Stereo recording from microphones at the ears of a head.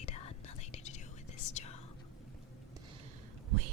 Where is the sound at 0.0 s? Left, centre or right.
Left.